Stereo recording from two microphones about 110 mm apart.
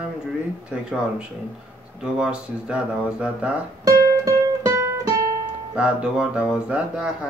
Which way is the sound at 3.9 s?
25° right (ahead or behind).